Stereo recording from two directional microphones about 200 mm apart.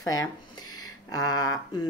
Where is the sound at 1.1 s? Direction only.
20° left (ahead or behind).